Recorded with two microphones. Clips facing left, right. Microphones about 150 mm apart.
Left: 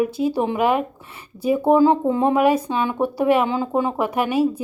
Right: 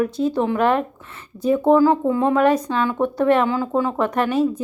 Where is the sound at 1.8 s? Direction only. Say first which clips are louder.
Even; 20° left (ahead or behind).